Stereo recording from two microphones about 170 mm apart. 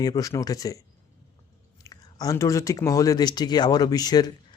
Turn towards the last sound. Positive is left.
turn(degrees=25)  # may be behind; listen again after turning